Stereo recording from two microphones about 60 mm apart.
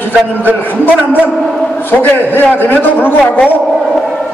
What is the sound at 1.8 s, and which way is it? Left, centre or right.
A man's voice, left.